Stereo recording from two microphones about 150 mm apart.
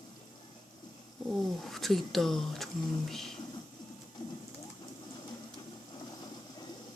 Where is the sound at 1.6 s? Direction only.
Centre (ahead or behind).